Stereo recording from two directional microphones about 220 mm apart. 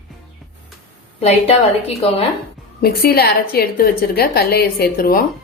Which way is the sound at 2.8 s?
40° left (ahead or behind).